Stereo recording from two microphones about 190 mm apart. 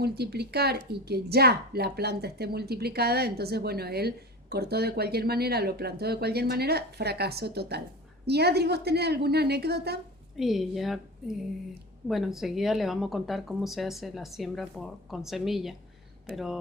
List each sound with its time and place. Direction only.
0.0 s a woman's voice: 60° right (ahead or behind)
10.3 s speech: centre (ahead or behind)